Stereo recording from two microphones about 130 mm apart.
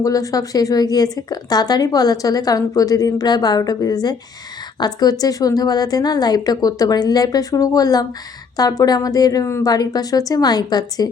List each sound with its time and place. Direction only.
0.0 s speech: 25° left (ahead or behind)